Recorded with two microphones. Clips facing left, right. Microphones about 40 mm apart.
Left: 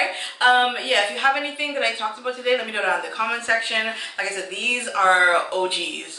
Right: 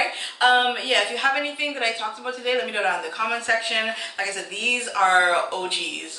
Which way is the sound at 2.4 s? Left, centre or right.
Centre.